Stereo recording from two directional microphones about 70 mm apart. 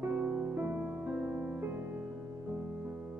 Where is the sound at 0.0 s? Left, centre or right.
Right.